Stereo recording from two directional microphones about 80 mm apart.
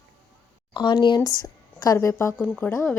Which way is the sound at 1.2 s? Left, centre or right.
Left.